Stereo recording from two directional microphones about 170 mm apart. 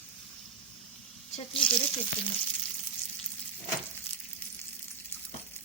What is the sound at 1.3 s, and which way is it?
Speech, 35° left (ahead or behind).